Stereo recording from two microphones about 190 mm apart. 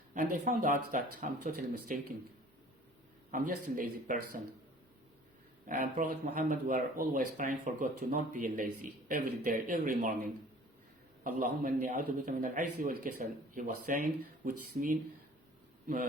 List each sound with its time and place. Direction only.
0.1 s speech: 45° right (ahead or behind)
3.3 s speech: 45° right (ahead or behind)
5.6 s speech: 45° right (ahead or behind)
11.2 s speech: 45° right (ahead or behind)